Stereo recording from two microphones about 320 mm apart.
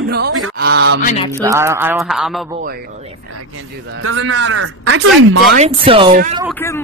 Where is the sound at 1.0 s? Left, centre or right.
Centre.